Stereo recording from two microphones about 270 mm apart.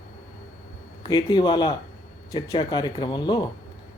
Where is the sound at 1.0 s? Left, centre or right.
Centre.